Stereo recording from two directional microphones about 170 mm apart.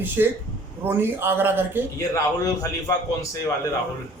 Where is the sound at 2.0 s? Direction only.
20° left (ahead or behind).